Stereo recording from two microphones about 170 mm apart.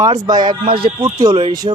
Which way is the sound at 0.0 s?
20° right (ahead or behind).